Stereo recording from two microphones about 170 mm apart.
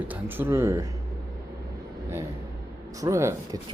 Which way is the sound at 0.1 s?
10° right (ahead or behind).